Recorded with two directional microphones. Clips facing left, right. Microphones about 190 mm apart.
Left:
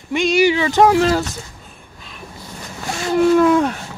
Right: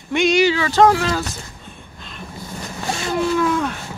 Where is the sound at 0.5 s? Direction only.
20° left (ahead or behind).